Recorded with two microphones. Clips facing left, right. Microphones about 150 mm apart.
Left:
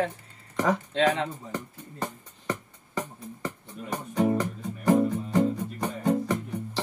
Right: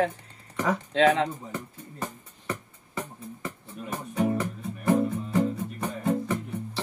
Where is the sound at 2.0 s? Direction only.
35° left (ahead or behind).